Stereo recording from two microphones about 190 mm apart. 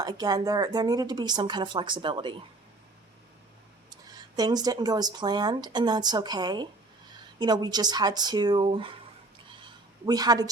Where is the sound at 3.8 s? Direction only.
20° right (ahead or behind).